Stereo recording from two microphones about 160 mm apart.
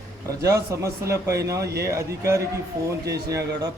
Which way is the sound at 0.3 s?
20° right (ahead or behind).